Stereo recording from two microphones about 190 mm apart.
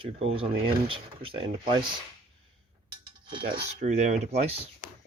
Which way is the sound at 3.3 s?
25° right (ahead or behind).